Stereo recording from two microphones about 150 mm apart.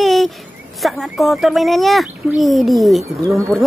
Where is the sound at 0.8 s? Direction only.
Centre (ahead or behind).